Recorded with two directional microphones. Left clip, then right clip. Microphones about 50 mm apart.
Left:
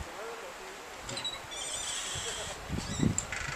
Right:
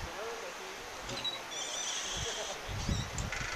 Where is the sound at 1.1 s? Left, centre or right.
Centre.